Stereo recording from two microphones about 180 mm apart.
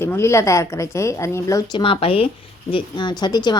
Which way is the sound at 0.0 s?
15° left (ahead or behind).